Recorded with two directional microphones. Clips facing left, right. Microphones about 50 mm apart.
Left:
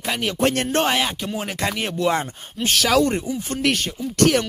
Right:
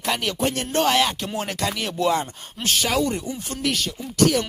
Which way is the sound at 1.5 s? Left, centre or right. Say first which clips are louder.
Left 2 dB; left.